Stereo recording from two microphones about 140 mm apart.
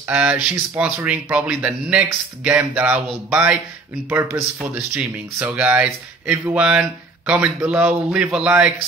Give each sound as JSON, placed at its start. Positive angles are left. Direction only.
{"t": 0.0, "sound": "speech", "side_deg": -10}